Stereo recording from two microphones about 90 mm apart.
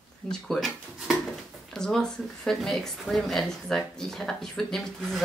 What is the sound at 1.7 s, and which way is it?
A woman's voice, 5° left (ahead or behind).